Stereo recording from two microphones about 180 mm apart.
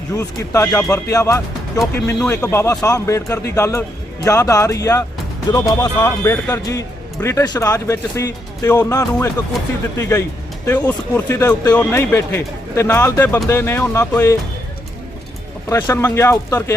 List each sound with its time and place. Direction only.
0.1 s speech: 15° left (ahead or behind)
15.7 s speech: 15° left (ahead or behind)